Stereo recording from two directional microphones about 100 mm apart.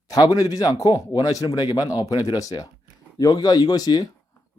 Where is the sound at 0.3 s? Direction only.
35° left (ahead or behind).